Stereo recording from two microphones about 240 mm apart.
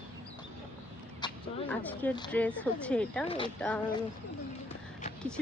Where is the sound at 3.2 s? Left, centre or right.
Left.